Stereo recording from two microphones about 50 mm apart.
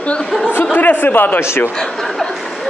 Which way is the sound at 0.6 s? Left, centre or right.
Left.